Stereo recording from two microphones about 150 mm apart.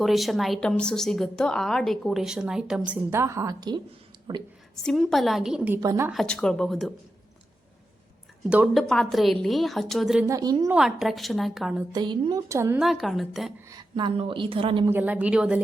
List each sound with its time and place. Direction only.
0.0 s a woman's voice: centre (ahead or behind); by 4.4 s 30° right (ahead or behind)
4.8 s a woman's voice: 5° left (ahead or behind)
5.8 s speech: 25° right (ahead or behind)
6.1 s a woman's voice: 5° left (ahead or behind)
8.4 s a woman's voice: 5° right (ahead or behind)
10.2 s speech: 25° right (ahead or behind)
10.7 s a woman's voice: 5° right (ahead or behind)
11.9 s speech: 30° right (ahead or behind)
12.5 s a woman's voice: 15° right (ahead or behind)
12.8 s a woman's voice: centre (ahead or behind)
13.7 s a woman's voice: 30° right (ahead or behind)
14.8 s a woman's voice: 10° right (ahead or behind)